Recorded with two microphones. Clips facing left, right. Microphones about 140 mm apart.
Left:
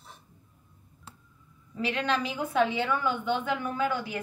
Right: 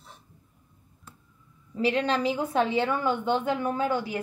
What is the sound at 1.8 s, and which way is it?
A woman's voice, 35° right (ahead or behind).